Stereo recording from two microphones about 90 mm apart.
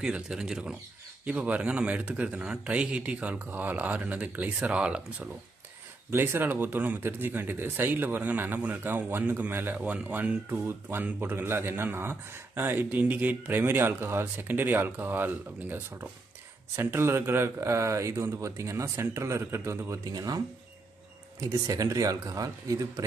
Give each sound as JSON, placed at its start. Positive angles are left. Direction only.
{"t": 0.0, "sound": "a man's voice", "side_deg": -5}
{"t": 6.0, "sound": "speech", "side_deg": -25}